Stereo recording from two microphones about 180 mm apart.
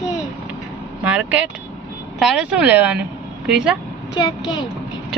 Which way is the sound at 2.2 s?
5° right (ahead or behind).